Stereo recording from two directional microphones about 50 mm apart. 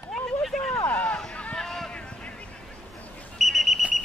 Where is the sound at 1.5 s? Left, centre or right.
Centre.